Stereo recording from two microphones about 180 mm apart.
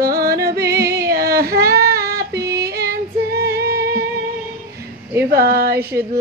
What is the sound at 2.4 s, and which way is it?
Female singing, 65° right (ahead or behind).